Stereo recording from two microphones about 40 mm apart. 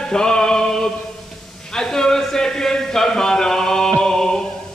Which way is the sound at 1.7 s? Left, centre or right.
Centre.